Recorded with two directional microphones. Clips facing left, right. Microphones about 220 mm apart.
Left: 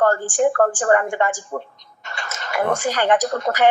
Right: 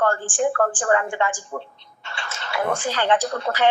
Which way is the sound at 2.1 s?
40° left (ahead or behind).